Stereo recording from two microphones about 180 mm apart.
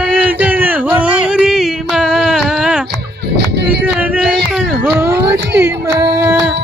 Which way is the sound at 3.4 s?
65° right (ahead or behind).